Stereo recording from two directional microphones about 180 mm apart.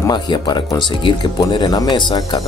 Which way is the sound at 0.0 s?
25° left (ahead or behind).